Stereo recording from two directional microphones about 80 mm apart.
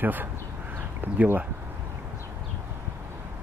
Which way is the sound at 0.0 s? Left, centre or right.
Right.